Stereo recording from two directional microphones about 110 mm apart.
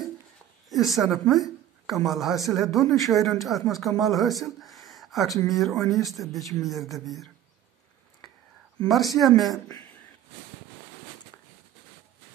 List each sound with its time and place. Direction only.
0.7 s a woman's voice: centre (ahead or behind)
8.8 s speech: centre (ahead or behind)